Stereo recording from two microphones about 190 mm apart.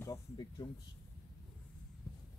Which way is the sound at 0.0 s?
20° left (ahead or behind).